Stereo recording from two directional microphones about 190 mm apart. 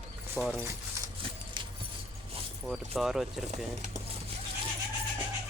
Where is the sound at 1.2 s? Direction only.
25° right (ahead or behind).